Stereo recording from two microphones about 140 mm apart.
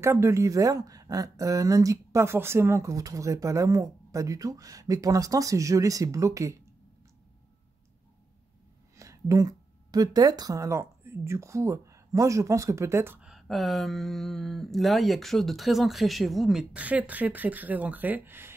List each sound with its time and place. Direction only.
0.0 s speech: 20° right (ahead or behind)
8.9 s speech: 20° right (ahead or behind)
13.2 s speech: centre (ahead or behind)